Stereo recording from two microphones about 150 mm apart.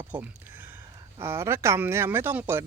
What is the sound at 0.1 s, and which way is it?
Speech, 10° right (ahead or behind).